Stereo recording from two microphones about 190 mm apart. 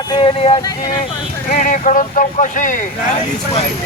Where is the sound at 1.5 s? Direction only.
45° left (ahead or behind).